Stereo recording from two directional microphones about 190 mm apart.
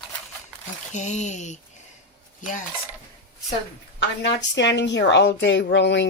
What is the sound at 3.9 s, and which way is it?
A woman's voice, 65° left (ahead or behind).